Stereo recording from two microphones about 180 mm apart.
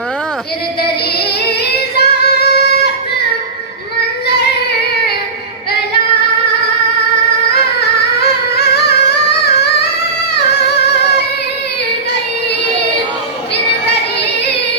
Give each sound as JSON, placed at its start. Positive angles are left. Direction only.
{"t": 2.0, "sound": "child singing", "side_deg": 65}
{"t": 8.5, "sound": "music", "side_deg": 65}